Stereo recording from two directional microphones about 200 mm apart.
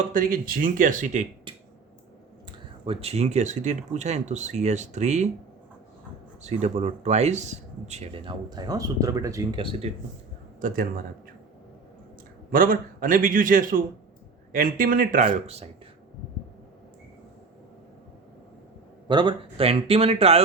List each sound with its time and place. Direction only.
0.1 s a man's voice: 45° right (ahead or behind)
2.5 s speech: 25° right (ahead or behind)
6.4 s speech: 35° right (ahead or behind); by 9.6 s 15° right (ahead or behind)
9.8 s speech: 30° right (ahead or behind)
10.6 s a man's voice: 45° right (ahead or behind)
12.5 s a man's voice: 45° right (ahead or behind)
19.0 s speech: 25° right (ahead or behind)